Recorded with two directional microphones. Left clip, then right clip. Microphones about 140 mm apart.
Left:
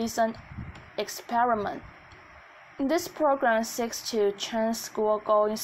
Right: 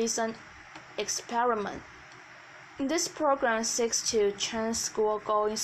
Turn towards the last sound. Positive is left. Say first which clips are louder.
# left 4 dB
turn(degrees=45)  # may be behind; listen again after turning